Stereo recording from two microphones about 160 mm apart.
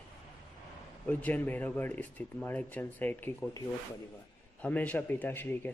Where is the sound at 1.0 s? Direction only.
10° left (ahead or behind).